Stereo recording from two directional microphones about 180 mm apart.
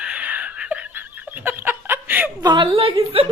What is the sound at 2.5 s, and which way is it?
Speech, 30° right (ahead or behind).